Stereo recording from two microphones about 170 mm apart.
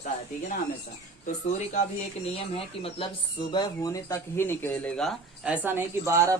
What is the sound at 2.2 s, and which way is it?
Speech, 35° left (ahead or behind).